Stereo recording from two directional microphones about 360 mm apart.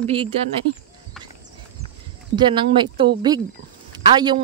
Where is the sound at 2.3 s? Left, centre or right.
Centre.